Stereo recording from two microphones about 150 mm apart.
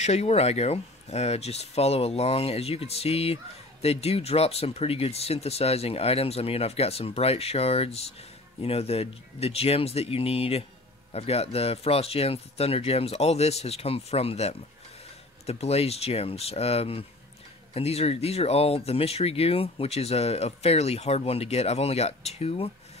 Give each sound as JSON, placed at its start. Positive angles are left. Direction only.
{"t": 0.0, "sound": "speech", "side_deg": 45}